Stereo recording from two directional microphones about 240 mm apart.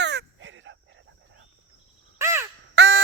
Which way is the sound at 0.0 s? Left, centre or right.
Right.